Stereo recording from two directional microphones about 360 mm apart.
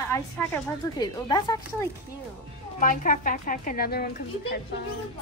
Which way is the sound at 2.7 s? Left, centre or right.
Left.